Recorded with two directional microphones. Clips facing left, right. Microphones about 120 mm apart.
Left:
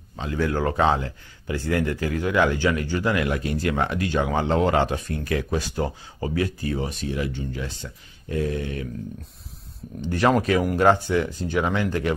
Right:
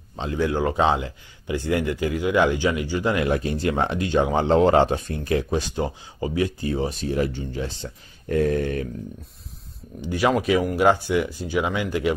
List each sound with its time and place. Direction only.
0.2 s speech: 25° right (ahead or behind)
8.3 s speech: 55° right (ahead or behind)
10.0 s speech: 5° right (ahead or behind)